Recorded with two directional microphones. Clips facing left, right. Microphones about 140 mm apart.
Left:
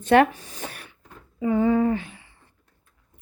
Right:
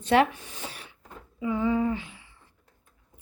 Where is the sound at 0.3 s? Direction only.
40° left (ahead or behind).